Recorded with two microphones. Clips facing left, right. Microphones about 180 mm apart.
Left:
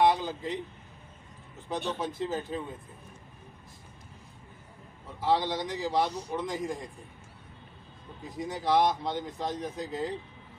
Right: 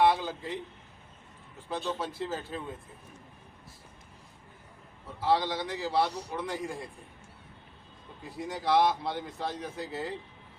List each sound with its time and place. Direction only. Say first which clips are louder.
0.0 s a man's voice: left 1 dB; 15° left (ahead or behind)
1.7 s speech: left 1 dB; 20° left (ahead or behind)
5.2 s speech: even; 15° left (ahead or behind)
8.3 s speech: even; 15° left (ahead or behind)